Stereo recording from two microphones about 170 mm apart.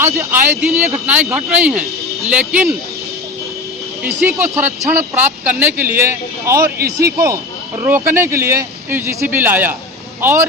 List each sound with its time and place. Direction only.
0.0 s a man's voice: 15° right (ahead or behind)
4.0 s a man's voice: 10° right (ahead or behind)
7.9 s a man's voice: 15° right (ahead or behind)